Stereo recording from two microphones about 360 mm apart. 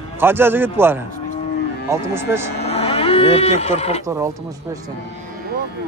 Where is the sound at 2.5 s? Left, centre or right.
Centre.